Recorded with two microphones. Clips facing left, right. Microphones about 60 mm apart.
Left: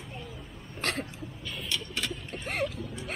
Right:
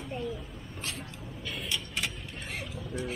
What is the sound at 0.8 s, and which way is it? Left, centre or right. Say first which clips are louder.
Hiccup: left 8 dB; left.